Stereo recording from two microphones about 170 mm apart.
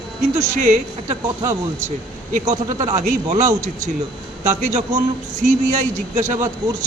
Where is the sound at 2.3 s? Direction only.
45° right (ahead or behind).